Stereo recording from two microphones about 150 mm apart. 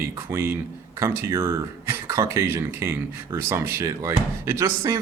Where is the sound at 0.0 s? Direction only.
15° right (ahead or behind).